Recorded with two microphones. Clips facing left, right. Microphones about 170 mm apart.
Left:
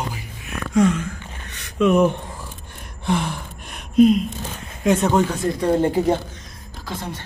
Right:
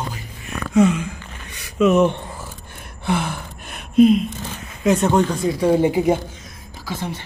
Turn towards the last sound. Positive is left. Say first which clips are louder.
# right 2 dB
turn(degrees=-10)  # may be behind; listen again after turning